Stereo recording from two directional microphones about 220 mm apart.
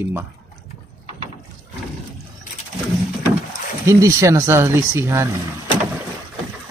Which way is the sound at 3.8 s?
15° right (ahead or behind).